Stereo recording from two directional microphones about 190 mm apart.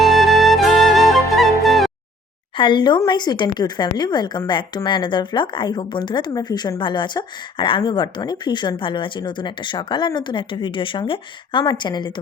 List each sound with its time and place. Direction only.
0.0 s music: centre (ahead or behind)
2.6 s a woman's voice: 25° left (ahead or behind)